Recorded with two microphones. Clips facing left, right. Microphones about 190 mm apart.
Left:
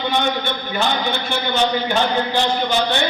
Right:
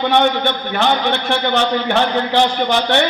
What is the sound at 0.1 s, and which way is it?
A man's voice, 70° right (ahead or behind).